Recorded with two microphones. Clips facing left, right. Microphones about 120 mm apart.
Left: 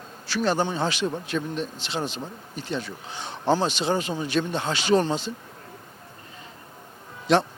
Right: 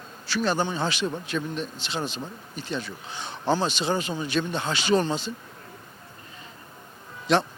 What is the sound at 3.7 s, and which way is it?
Speech, 60° left (ahead or behind).